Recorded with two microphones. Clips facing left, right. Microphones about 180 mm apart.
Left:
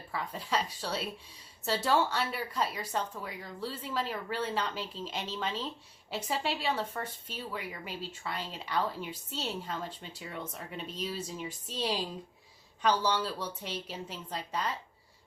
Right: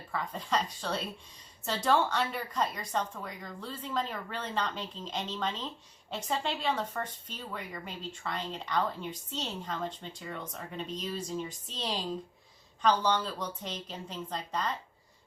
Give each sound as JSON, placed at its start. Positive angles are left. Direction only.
{"t": 0.1, "sound": "a woman's voice", "side_deg": 5}